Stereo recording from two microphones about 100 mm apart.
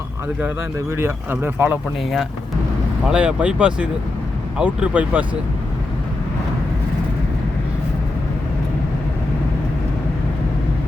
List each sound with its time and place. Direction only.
0.9 s speech: 25° right (ahead or behind)
3.1 s speech: 10° right (ahead or behind)